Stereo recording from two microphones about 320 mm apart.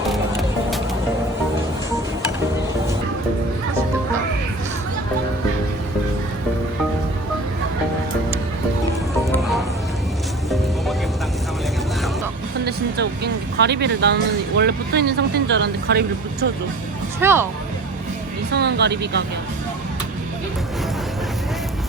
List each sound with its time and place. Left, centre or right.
12.6 s music: right
14.6 s speech: right
17.2 s speech: centre
18.5 s speech: right